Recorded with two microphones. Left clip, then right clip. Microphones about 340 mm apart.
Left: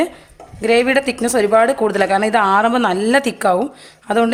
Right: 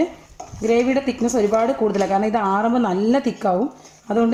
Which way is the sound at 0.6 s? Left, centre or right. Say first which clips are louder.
Left 4 dB; left.